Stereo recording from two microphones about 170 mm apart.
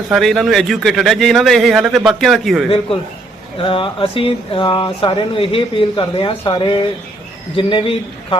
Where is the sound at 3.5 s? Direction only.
30° left (ahead or behind).